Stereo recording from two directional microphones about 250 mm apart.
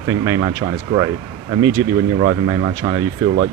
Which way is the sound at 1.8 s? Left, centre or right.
Centre.